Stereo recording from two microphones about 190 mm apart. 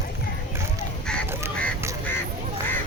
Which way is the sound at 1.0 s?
5° left (ahead or behind).